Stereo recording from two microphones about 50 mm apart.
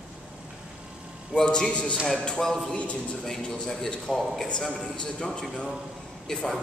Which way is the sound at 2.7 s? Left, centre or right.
Left.